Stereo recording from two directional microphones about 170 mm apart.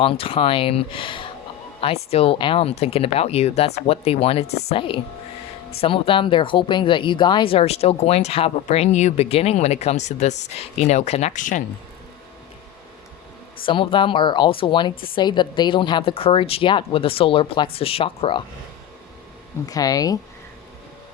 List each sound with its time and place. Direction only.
0.0 s speech: 35° left (ahead or behind)
13.7 s speech: 30° left (ahead or behind)
19.6 s speech: 20° left (ahead or behind)